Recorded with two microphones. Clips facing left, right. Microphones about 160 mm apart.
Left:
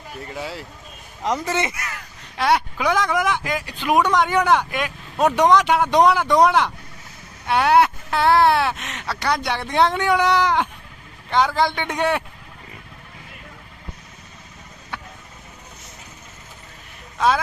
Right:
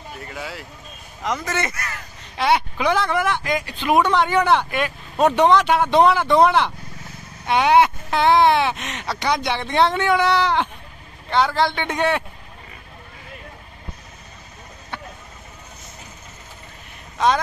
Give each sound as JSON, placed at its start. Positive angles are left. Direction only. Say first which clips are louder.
{"t": 0.3, "sound": "speech", "louder": "left 3 dB", "side_deg": 30}
{"t": 1.6, "sound": "speech", "louder": "left 1 dB", "side_deg": 10}
{"t": 2.3, "sound": "speech", "louder": "even", "side_deg": 0}
{"t": 3.1, "sound": "speech", "louder": "even", "side_deg": 10}
{"t": 9.0, "sound": "speech", "louder": "right 1 dB", "side_deg": -10}
{"t": 9.6, "sound": "speech", "louder": "left 1 dB", "side_deg": 10}